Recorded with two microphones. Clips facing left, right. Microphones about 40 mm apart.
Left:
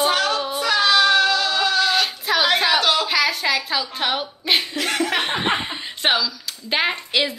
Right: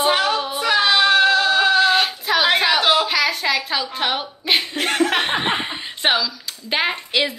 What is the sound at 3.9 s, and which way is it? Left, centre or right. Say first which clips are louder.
Speech: right 1 dB; centre.